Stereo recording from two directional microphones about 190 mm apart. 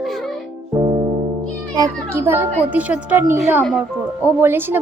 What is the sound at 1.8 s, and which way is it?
A woman's voice, 15° right (ahead or behind).